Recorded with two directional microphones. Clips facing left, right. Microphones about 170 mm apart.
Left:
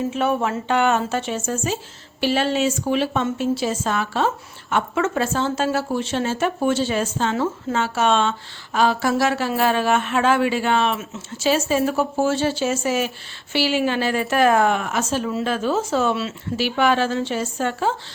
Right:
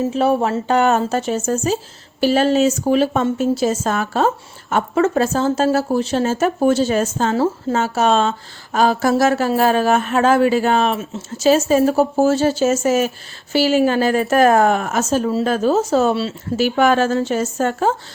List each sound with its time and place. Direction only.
0.0 s a woman's voice: 35° right (ahead or behind)